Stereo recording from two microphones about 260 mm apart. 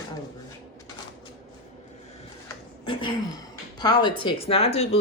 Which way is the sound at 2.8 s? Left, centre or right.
Centre.